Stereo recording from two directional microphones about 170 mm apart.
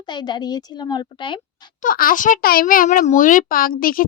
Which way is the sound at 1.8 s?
55° left (ahead or behind).